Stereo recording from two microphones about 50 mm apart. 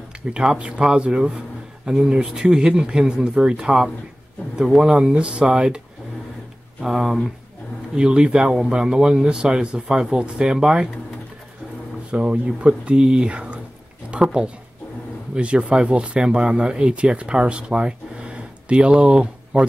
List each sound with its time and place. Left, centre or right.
0.3 s speech: centre
4.9 s speech: right
6.8 s speech: centre
7.9 s speech: centre
12.1 s speech: right
14.1 s a sound: right
15.3 s speech: right